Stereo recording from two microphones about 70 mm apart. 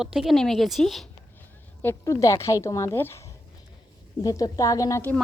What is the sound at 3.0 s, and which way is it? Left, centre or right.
Speech, left.